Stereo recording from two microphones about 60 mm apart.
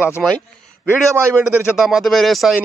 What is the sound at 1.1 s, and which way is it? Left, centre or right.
Speech, right.